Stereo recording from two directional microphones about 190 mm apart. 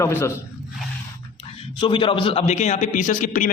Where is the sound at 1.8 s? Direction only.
25° left (ahead or behind); by 3.4 s 40° left (ahead or behind).